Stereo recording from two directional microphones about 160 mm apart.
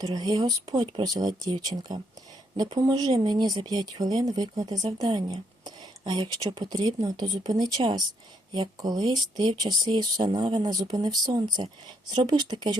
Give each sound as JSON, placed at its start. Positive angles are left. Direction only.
{"t": 0.0, "sound": "speech", "side_deg": -25}